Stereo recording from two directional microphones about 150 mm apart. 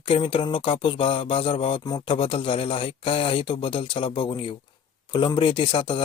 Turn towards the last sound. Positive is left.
turn(degrees=35)  # may be behind; listen again after turning